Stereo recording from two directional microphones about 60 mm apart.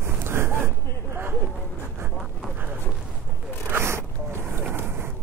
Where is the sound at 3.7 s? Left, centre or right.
Right.